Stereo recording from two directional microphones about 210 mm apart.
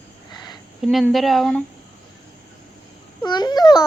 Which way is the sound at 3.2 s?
20° left (ahead or behind).